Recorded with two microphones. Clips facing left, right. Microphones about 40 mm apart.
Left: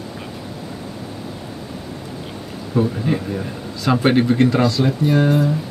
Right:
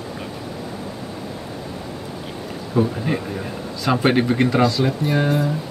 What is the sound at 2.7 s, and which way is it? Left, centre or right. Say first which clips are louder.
Speech: left 1 dB; centre.